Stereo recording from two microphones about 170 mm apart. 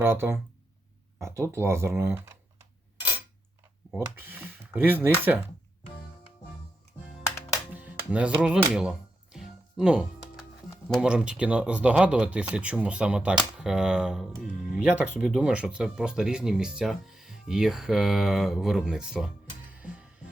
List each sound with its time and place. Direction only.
0.0 s speech: 15° right (ahead or behind)
3.9 s speech: 10° right (ahead or behind)
7.3 s music: 20° left (ahead or behind)
7.7 s music: 10° right (ahead or behind)
10.8 s speech: 5° right (ahead or behind)
19.7 s music: 5° right (ahead or behind)